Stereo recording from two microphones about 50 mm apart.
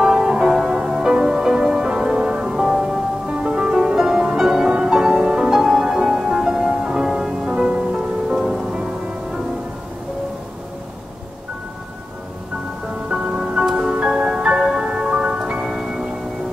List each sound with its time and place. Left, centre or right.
0.0 s music: centre
8.4 s rain on surface: centre
13.1 s music: centre